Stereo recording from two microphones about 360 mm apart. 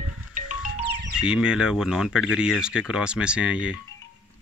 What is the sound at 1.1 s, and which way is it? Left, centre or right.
Speech, centre.